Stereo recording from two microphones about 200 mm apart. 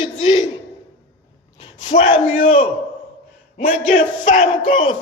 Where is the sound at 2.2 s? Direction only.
40° left (ahead or behind).